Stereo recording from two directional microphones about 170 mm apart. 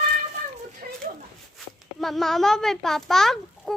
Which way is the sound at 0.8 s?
55° right (ahead or behind).